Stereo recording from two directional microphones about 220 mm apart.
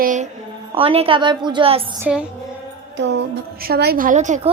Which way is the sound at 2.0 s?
5° right (ahead or behind).